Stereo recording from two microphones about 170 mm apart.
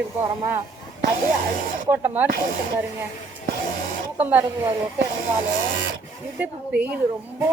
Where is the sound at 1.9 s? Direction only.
10° right (ahead or behind).